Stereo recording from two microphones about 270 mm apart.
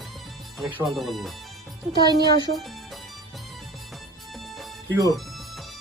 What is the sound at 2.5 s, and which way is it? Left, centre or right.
Speech, right.